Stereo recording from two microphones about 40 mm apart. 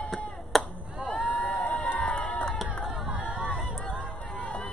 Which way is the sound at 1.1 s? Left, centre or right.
Left.